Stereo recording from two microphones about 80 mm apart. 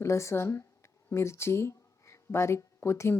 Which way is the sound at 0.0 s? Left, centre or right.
Left.